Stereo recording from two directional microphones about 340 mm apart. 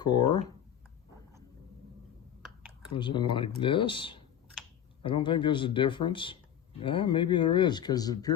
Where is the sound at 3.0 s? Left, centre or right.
Centre.